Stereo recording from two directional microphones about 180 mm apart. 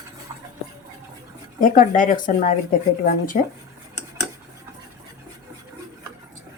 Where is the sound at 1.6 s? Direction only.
50° left (ahead or behind).